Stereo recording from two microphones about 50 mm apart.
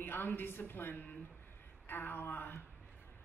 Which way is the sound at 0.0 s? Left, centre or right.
Left.